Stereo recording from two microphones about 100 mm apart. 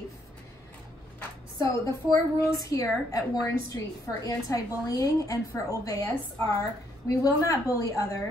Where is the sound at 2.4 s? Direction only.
35° left (ahead or behind).